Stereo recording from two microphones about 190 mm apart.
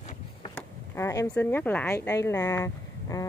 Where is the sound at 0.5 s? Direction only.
15° left (ahead or behind).